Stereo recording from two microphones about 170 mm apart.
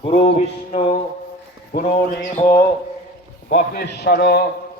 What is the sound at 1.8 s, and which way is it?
Speech, 40° left (ahead or behind).